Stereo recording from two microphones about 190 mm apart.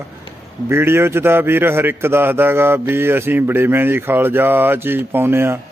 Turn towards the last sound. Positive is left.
turn(degrees=-10)  # may be behind; listen again after turning